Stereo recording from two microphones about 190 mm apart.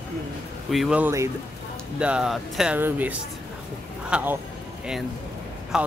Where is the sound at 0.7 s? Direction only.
Centre (ahead or behind).